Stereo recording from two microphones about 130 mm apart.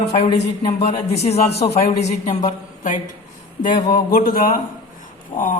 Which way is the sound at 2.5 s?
80° left.